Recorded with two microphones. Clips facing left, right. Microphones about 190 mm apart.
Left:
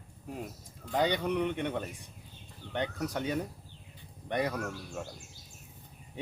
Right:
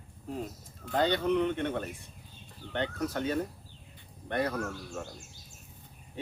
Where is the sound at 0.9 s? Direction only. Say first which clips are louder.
Right 2 dB; 10° left (ahead or behind).